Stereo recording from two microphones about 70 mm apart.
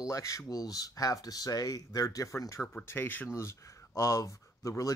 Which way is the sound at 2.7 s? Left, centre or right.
Left.